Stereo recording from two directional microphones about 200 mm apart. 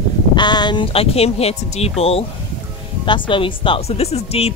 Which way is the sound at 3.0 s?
25° left (ahead or behind).